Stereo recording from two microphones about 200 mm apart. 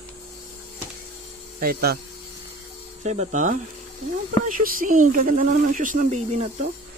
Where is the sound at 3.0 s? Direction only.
35° right (ahead or behind).